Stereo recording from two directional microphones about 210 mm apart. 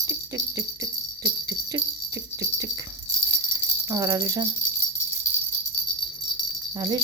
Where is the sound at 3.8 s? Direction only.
15° right (ahead or behind).